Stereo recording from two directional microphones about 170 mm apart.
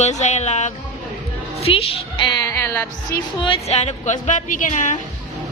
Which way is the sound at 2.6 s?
15° left (ahead or behind).